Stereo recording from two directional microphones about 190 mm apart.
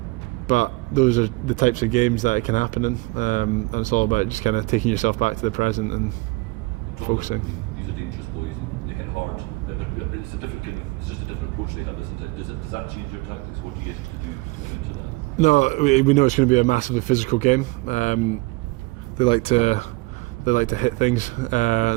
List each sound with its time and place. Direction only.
0.4 s speech: 40° left (ahead or behind)
7.0 s speech: 40° left (ahead or behind)
15.4 s speech: 40° left (ahead or behind)
19.1 s speech: 25° left (ahead or behind)